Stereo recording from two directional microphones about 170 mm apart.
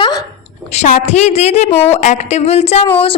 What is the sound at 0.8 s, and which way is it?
A woman's voice, 40° left (ahead or behind).